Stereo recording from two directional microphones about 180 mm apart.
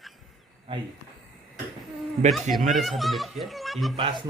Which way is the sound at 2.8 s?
Centre (ahead or behind).